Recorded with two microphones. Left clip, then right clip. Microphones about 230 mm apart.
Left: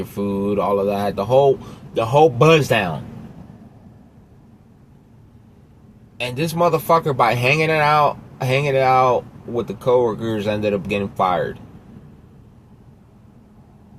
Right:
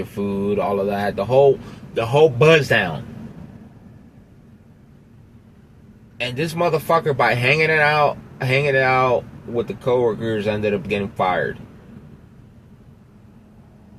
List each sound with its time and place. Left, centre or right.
0.2 s speech: left
6.2 s speech: left